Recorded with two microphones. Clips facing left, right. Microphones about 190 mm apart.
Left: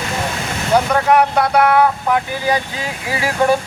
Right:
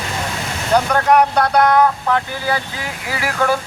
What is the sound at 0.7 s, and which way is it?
Speech, 5° left (ahead or behind).